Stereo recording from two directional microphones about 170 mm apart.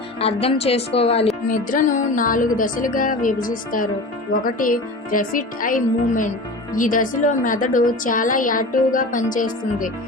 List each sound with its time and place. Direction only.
0.2 s a woman's voice: 35° left (ahead or behind)
1.5 s a woman's voice: 50° left (ahead or behind)